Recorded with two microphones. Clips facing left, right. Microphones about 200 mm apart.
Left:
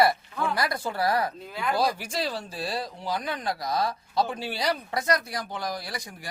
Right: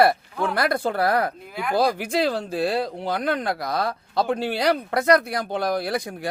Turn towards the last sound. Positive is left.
turn(degrees=-60)  # may be behind; listen again after turning